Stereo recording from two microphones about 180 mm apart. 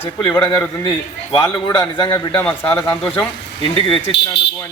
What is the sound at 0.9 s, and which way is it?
A man's voice, 25° left (ahead or behind).